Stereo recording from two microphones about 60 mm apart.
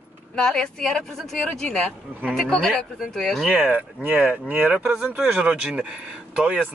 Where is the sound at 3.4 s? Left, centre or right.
Right.